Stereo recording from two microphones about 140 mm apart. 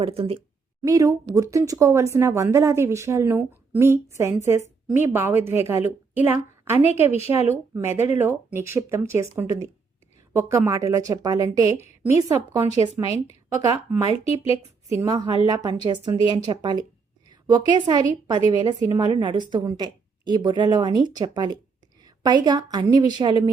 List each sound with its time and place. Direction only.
0.0 s speech: 45° right (ahead or behind)
0.8 s a woman's voice: 25° right (ahead or behind)
12.8 s speech: 55° right (ahead or behind)
14.1 s speech: 45° left (ahead or behind)
14.9 s a woman's voice: 25° right (ahead or behind)